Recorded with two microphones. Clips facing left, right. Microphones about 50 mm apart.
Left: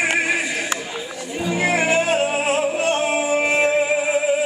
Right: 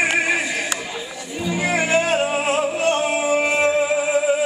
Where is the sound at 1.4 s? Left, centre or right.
Left.